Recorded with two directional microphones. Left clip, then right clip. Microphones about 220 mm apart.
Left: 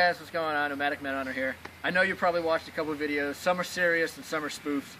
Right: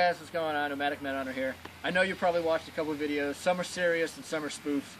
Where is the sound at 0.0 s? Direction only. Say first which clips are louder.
Left 2 dB; 5° right (ahead or behind).